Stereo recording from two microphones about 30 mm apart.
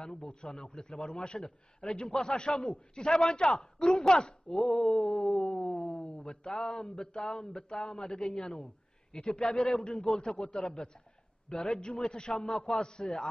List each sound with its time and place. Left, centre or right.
0.1 s a man's voice: left
1.8 s a man's voice: centre
2.1 s a man's voice: left
10.2 s a man's voice: left